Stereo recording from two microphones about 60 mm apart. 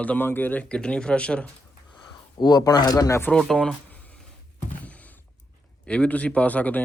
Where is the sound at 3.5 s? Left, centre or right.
Centre.